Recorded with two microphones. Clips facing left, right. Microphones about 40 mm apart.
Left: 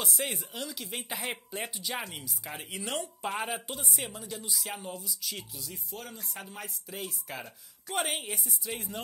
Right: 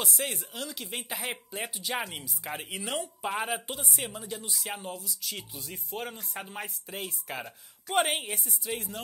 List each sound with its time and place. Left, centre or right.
0.0 s speech: centre
1.9 s speech: centre
3.9 s speech: centre
4.9 s speech: centre
5.6 s speech: right
6.3 s speech: right
7.0 s speech: centre
7.9 s speech: right
8.3 s speech: centre